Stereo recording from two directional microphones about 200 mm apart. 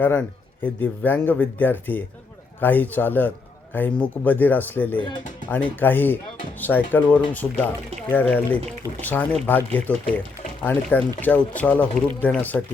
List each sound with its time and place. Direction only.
0.0 s a man's voice: 10° left (ahead or behind)
4.9 s speech: 25° left (ahead or behind)
5.8 s a man's voice: 10° left (ahead or behind)